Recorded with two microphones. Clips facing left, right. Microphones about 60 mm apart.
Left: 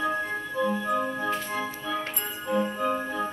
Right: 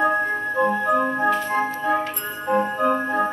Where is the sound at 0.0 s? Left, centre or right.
Right.